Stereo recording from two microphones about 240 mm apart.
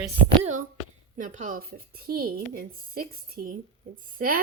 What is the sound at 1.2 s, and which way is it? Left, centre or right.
A woman's voice, right.